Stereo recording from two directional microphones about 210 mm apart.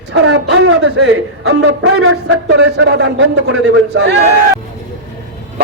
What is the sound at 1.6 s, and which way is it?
Speech, 90° right.